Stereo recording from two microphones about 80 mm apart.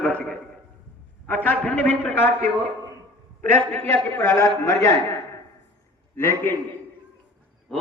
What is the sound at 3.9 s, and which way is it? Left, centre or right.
A man's voice, left.